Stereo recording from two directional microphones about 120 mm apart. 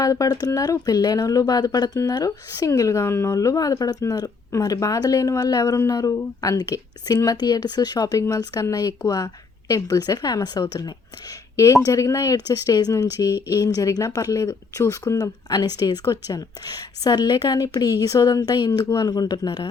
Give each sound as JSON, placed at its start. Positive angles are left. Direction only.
{"t": 0.0, "sound": "speech", "side_deg": 30}